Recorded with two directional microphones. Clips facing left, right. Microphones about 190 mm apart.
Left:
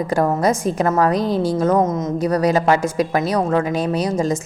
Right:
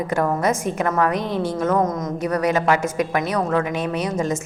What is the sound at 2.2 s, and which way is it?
A woman's voice, 35° left (ahead or behind).